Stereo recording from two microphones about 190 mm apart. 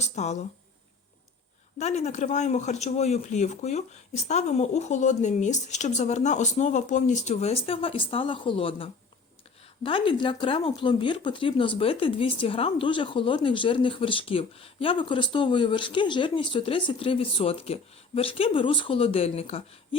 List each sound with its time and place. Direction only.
0.0 s speech: 35° left (ahead or behind)
1.8 s speech: 35° left (ahead or behind)